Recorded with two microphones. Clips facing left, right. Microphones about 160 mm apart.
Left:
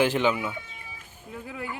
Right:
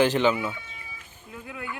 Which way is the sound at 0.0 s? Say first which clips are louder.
Right 2 dB; 10° left (ahead or behind).